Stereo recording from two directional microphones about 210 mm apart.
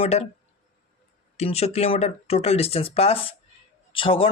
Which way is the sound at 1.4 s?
30° left (ahead or behind).